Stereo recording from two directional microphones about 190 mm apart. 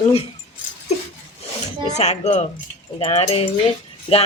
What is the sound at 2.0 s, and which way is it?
Speech, 35° left (ahead or behind).